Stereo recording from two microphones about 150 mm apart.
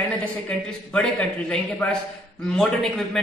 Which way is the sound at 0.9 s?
5° left (ahead or behind).